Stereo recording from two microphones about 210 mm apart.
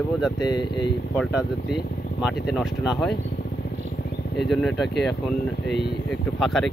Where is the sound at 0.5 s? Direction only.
20° left (ahead or behind).